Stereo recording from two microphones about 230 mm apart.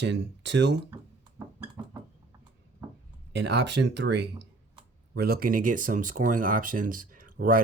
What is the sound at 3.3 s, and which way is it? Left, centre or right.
Speech, right.